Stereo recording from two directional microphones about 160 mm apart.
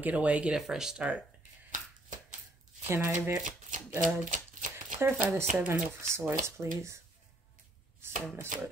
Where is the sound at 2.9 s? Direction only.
15° right (ahead or behind).